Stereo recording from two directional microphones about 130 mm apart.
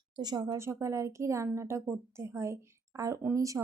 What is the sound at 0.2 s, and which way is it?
Speech, 30° right (ahead or behind).